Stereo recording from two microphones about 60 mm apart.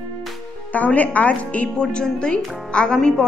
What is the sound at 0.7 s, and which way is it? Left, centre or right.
A woman's voice, left.